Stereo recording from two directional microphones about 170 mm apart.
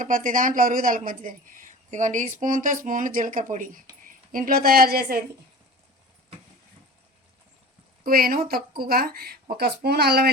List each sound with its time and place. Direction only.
0.0 s a woman's voice: 50° right (ahead or behind)
8.0 s a woman's voice: 60° right (ahead or behind)